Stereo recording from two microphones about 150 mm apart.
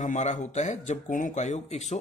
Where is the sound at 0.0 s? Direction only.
55° left (ahead or behind).